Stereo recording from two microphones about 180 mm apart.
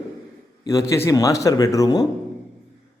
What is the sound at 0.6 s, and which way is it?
Speech, 20° left (ahead or behind).